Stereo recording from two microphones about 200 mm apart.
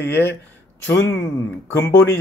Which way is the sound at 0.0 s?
60° left (ahead or behind).